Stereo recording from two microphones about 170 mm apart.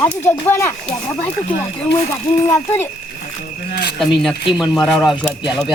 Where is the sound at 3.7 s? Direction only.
70° left (ahead or behind).